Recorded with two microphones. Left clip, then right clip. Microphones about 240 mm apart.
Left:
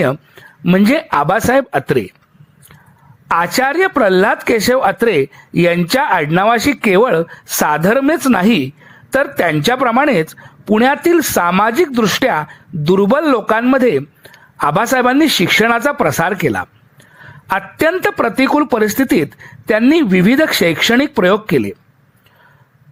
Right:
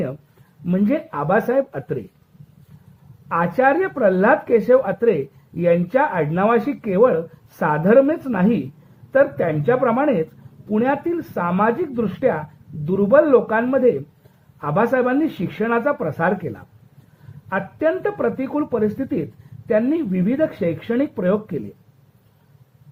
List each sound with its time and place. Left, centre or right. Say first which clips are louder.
0.6 s speech: left 8 dB; left
3.2 s speech: left 3 dB; left